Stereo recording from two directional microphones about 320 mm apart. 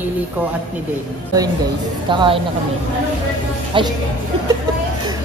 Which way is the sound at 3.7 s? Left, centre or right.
Centre.